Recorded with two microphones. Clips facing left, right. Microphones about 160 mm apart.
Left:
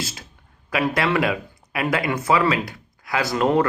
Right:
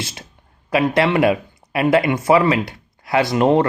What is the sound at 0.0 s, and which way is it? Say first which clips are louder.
Speech: right 1 dB; 25° right (ahead or behind).